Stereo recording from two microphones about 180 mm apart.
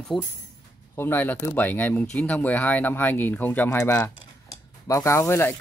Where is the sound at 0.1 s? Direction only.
Centre (ahead or behind).